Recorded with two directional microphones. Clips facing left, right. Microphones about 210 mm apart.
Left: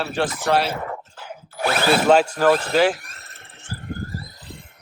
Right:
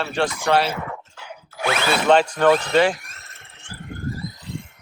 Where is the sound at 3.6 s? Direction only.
35° left (ahead or behind).